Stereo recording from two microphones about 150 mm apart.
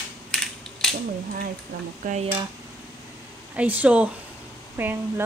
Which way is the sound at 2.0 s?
60° right (ahead or behind).